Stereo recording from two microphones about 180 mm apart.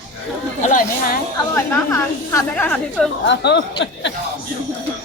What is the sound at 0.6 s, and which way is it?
Speech, 45° left (ahead or behind).